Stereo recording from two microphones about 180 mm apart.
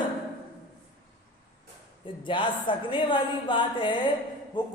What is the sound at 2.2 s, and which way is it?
Speech, 30° left (ahead or behind).